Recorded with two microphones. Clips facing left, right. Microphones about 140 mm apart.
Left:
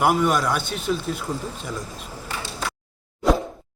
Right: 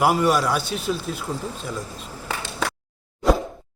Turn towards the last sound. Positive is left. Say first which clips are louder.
# even
turn(degrees=0)  # may be behind; listen again after turning